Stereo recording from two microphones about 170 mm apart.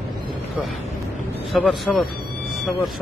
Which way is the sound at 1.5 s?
5° left (ahead or behind).